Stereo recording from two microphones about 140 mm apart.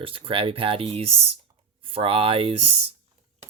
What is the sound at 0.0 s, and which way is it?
Speech, 40° right (ahead or behind).